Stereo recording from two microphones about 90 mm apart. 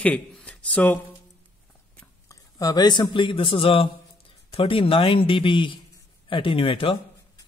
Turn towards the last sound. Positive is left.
turn(degrees=85)